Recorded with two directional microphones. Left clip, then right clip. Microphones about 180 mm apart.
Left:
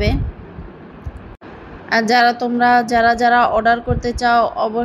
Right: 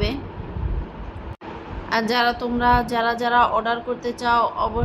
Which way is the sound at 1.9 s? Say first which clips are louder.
Left 7 dB; 25° left (ahead or behind).